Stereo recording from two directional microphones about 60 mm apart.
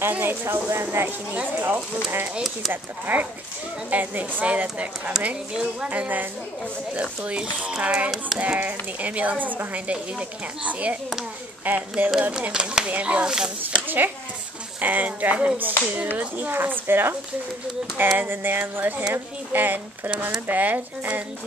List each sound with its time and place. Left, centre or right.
0.1 s speech: right
1.0 s speech: right
5.9 s speech: right
13.8 s speech: right